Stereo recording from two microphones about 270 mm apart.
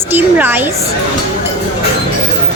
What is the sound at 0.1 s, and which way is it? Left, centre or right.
Speech, centre.